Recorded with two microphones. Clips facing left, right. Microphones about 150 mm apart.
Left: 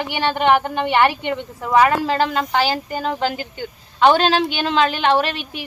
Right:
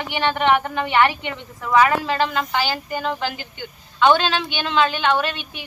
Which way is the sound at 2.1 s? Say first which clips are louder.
Left 3 dB; 40° left (ahead or behind).